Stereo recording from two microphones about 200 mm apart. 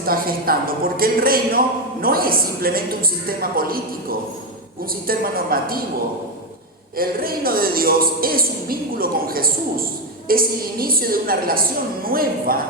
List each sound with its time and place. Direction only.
0.0 s speech: 45° right (ahead or behind)
5.0 s speech: 45° right (ahead or behind)
6.9 s speech: 45° right (ahead or behind)